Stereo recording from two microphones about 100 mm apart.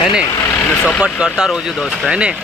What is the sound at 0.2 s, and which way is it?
Speech, 35° left (ahead or behind).